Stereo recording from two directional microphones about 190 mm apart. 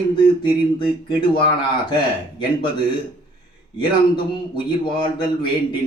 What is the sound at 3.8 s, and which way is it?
Speech, 25° left (ahead or behind).